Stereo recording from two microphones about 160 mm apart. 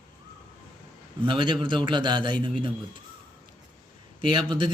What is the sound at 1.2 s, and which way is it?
A man's voice, 30° right (ahead or behind).